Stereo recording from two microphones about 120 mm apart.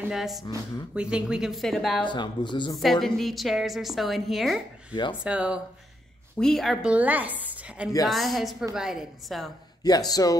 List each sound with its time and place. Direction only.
0.1 s a woman's voice: 5° right (ahead or behind)
2.0 s speech: 40° left (ahead or behind)
2.8 s a woman's voice: centre (ahead or behind)
6.4 s a woman's voice: centre (ahead or behind)
6.9 s a woman's voice: 15° right (ahead or behind)
9.8 s speech: 35° left (ahead or behind)